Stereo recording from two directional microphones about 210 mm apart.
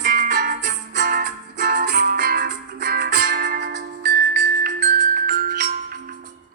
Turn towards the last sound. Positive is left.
turn(degrees=-40)  # may be behind; listen again after turning